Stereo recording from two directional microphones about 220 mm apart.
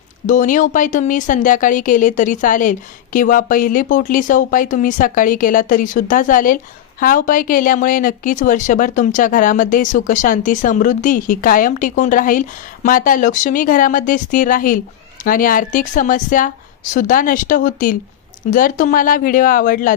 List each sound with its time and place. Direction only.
0.3 s speech: 35° left (ahead or behind)